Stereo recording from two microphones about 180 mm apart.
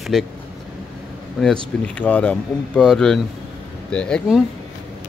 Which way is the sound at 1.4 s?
5° left (ahead or behind).